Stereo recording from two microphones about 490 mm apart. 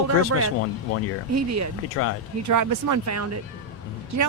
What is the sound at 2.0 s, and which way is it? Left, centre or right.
Speech, left.